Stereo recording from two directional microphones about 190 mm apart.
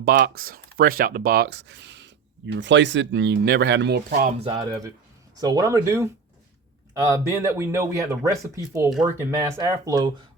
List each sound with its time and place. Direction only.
0.0 s speech: 50° right (ahead or behind)
4.4 s speech: 20° right (ahead or behind)
7.3 s speech: 15° right (ahead or behind)